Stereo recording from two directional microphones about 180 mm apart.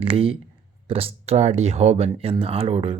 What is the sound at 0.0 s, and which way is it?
Speech, 30° right (ahead or behind).